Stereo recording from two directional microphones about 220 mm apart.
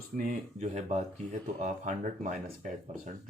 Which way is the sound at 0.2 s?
30° right (ahead or behind).